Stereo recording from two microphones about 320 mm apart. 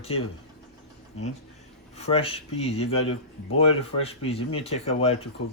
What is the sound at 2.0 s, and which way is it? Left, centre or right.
Speech, centre.